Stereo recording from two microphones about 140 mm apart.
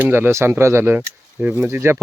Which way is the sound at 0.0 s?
15° right (ahead or behind).